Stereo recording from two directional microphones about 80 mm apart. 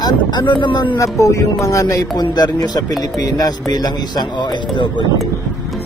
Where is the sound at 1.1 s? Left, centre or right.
Left.